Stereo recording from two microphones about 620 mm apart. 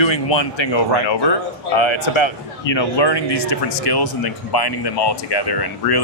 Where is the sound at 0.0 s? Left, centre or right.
Left.